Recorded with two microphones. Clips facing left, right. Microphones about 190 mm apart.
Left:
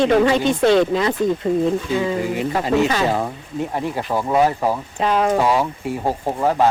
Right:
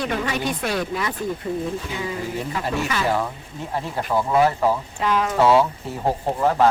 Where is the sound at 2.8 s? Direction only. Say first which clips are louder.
Left 4 dB; 35° left (ahead or behind).